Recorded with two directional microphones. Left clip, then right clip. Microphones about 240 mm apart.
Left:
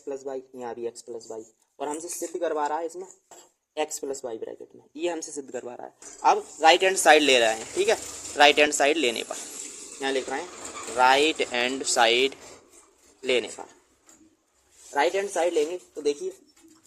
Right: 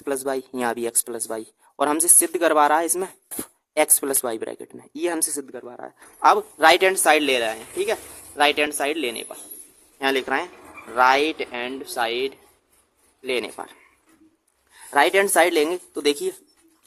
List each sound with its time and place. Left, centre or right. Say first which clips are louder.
0.0 s speech: right 8 dB; right
4.1 s speech: right 7 dB; right
5.5 s speech: even; centre
6.2 s speech: right 4 dB; right
6.9 s speech: left 1 dB; centre
10.0 s speech: right 6 dB; centre
13.6 s speech: right 6 dB; right
14.9 s speech: right 7 dB; right